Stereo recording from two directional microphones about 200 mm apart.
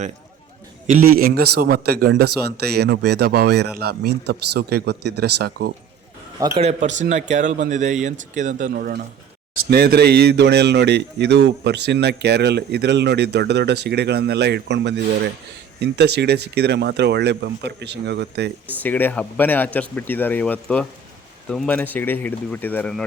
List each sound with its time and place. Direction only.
0.9 s a man's voice: 45° right (ahead or behind)
6.6 s speech: 35° right (ahead or behind); by 18.5 s 55° right (ahead or behind)
18.7 s speech: 10° left (ahead or behind)